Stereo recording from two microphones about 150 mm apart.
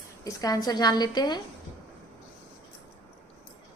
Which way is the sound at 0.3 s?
25° left (ahead or behind).